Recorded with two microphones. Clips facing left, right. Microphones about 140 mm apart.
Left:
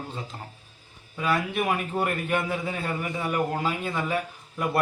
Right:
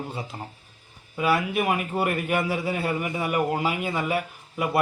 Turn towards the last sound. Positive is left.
turn(degrees=-10)  # may be behind; listen again after turning